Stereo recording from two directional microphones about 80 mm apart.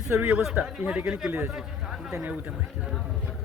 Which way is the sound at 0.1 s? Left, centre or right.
Centre.